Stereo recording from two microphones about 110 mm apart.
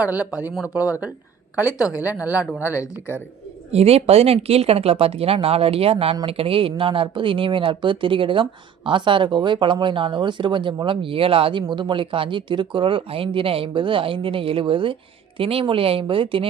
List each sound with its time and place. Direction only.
0.0 s speech: 10° right (ahead or behind)
2.7 s speech: 30° left (ahead or behind)
3.7 s speech: 65° right (ahead or behind)
11.6 s speech: 45° right (ahead or behind)